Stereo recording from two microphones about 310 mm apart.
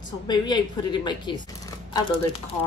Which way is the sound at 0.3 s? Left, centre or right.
Centre.